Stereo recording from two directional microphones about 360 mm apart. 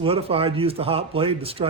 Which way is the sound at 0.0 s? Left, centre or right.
Centre.